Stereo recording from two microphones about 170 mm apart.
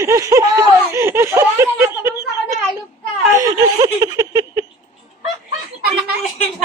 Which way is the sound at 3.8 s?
20° right (ahead or behind).